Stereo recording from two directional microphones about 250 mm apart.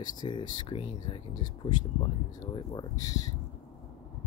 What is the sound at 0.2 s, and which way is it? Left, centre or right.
Speech, centre.